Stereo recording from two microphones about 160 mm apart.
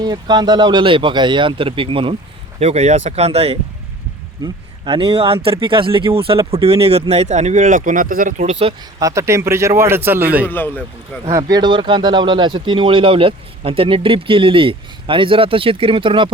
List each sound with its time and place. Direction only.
0.0 s speech: 25° right (ahead or behind); by 8.4 s 60° right (ahead or behind)
8.4 s speech: 35° right (ahead or behind)
9.0 s speech: 20° right (ahead or behind)